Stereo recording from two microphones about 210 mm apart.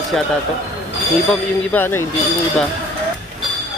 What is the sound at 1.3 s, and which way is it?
Speech, 10° left (ahead or behind).